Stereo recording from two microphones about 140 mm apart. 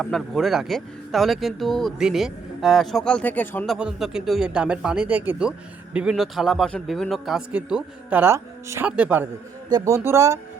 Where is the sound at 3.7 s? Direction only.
5° right (ahead or behind).